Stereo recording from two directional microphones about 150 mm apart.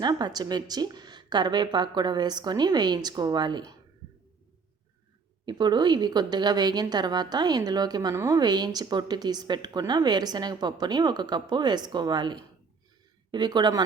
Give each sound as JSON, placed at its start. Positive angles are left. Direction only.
{"t": 0.0, "sound": "a woman's voice", "side_deg": -25}
{"t": 5.5, "sound": "a woman's voice", "side_deg": -30}